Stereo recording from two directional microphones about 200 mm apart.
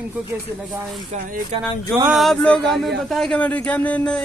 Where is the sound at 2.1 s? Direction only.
Centre (ahead or behind).